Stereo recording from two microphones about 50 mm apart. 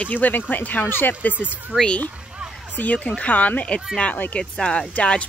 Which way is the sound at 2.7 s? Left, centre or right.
Left.